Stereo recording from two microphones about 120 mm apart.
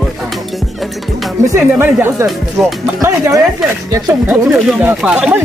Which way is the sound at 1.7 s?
20° right (ahead or behind).